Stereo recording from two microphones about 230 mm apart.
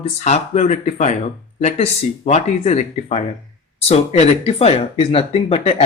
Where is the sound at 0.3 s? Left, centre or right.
Left.